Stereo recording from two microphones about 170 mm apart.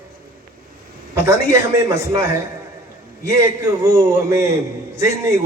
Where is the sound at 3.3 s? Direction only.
20° right (ahead or behind).